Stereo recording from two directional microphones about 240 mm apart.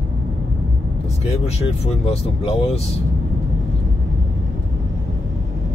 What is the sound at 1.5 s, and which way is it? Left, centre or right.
Speech, left.